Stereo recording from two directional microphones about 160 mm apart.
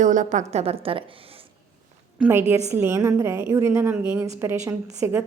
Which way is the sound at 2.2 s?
15° right (ahead or behind).